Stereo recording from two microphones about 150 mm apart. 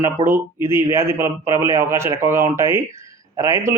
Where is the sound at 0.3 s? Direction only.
15° right (ahead or behind).